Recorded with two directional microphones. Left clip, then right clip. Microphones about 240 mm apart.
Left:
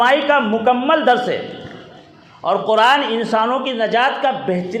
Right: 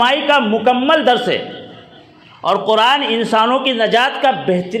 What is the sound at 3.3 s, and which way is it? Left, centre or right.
A man's voice, right.